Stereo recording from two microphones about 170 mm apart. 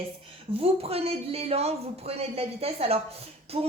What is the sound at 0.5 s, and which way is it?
A woman's voice, 35° right (ahead or behind).